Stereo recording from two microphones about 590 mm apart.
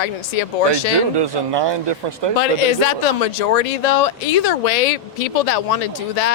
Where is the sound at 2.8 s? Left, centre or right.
Left.